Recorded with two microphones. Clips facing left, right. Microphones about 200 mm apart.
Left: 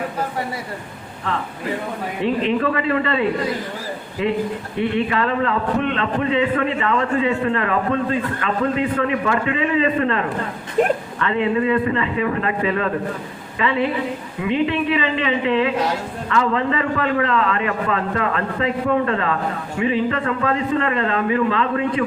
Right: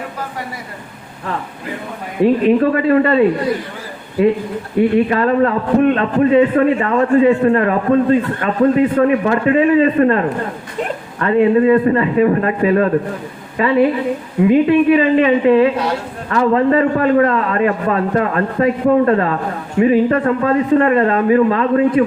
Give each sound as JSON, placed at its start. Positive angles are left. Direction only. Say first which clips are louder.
{"t": 2.2, "sound": "a man's voice", "louder": "right 8 dB", "side_deg": -50}
{"t": 5.0, "sound": "a man's voice", "louder": "right 6 dB", "side_deg": -45}
{"t": 10.8, "sound": "speech", "louder": "left 5 dB", "side_deg": 50}
{"t": 11.2, "sound": "a man's voice", "louder": "right 10 dB", "side_deg": -45}